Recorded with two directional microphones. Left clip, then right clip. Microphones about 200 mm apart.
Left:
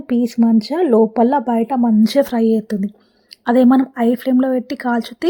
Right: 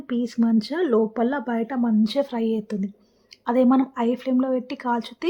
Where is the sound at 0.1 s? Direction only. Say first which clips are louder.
Left 7 dB; 20° left (ahead or behind).